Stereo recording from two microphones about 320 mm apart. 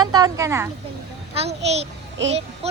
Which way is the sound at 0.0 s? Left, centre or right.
Centre.